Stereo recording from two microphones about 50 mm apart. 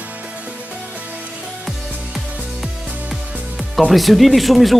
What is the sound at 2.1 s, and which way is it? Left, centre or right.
Music, centre.